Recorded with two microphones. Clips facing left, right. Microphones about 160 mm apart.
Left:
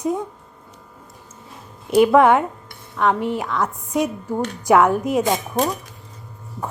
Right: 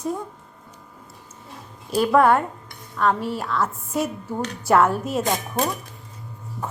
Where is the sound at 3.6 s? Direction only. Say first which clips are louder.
Left 3 dB; centre (ahead or behind).